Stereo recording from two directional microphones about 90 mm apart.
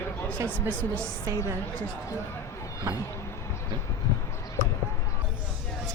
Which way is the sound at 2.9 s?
40° right (ahead or behind).